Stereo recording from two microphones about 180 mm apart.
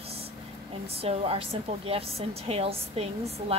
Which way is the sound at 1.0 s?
35° right (ahead or behind).